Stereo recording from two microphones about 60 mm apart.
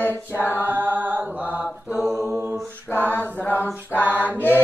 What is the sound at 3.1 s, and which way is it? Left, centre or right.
Mantra, left.